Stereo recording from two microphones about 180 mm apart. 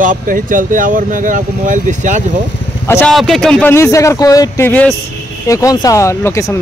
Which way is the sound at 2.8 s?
10° left (ahead or behind).